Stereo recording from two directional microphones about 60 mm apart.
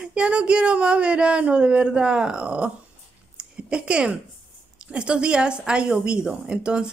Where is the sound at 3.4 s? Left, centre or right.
Centre.